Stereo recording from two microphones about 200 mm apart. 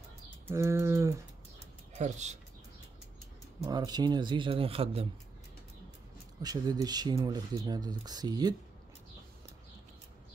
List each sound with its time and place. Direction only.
0.5 s bird: 15° right (ahead or behind)
2.0 s speech: 35° right (ahead or behind)
3.6 s speech: 20° right (ahead or behind)
6.4 s speech: 20° right (ahead or behind)